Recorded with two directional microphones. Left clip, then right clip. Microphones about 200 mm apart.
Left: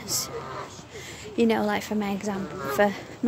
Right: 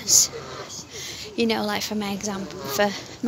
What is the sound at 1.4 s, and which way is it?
Speech, 15° left (ahead or behind).